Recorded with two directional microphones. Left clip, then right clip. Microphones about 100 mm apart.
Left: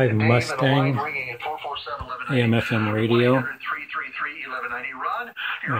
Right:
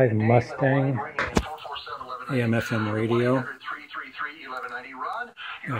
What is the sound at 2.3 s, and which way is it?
Speech, 10° left (ahead or behind).